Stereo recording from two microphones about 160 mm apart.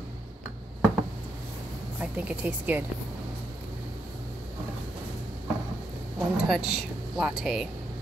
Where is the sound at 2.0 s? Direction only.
10° right (ahead or behind).